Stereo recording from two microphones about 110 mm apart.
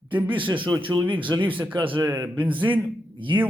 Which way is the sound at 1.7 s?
50° right (ahead or behind).